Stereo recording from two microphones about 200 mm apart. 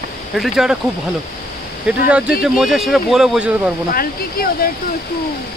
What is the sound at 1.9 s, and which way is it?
Speech, 5° right (ahead or behind).